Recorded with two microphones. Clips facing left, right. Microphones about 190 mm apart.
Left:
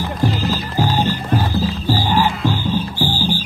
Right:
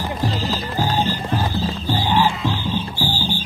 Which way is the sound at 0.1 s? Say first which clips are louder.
Left 5 dB; centre (ahead or behind).